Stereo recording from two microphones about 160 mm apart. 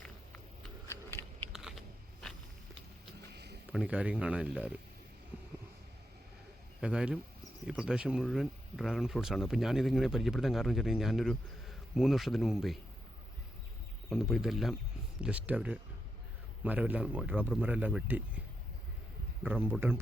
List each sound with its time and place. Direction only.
1.5 s a sound: 5° right (ahead or behind)
3.3 s a sound: 90° right
3.7 s speech: 5° right (ahead or behind)
6.8 s speech: 5° right (ahead or behind)
14.1 s speech: centre (ahead or behind)
19.5 s speech: 15° right (ahead or behind)